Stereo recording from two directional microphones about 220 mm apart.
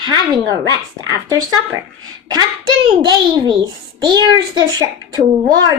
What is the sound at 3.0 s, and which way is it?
A child's voice, 20° right (ahead or behind).